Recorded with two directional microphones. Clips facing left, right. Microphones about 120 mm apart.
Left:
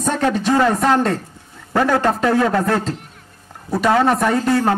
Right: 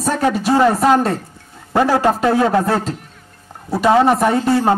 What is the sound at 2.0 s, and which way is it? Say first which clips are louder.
Speech: right 2 dB; 15° right (ahead or behind).